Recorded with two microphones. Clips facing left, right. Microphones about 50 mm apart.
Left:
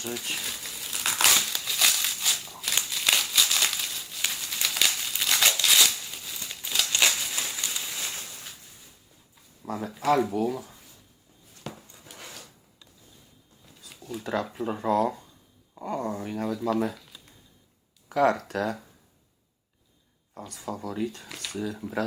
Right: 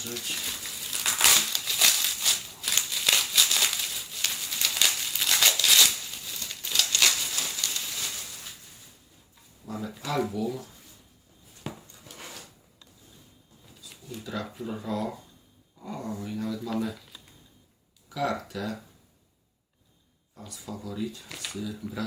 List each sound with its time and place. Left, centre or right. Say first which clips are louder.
0.3 s crumpling: left 1 dB; centre
6.9 s a sound: left 2 dB; centre
9.6 s speech: left 9 dB; left
11.6 s a sound: right 1 dB; centre
12.1 s drawer open or close: right 1 dB; centre
14.1 s speech: left 5 dB; centre
14.6 s speech: left 8 dB; left
16.6 s speech: left 8 dB; centre
16.9 s a sound: right 1 dB; centre
18.1 s speech: left 7 dB; left
20.5 s speech: left 4 dB; left